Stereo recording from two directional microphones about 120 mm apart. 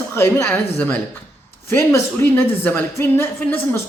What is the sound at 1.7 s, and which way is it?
A man's voice, 20° left (ahead or behind).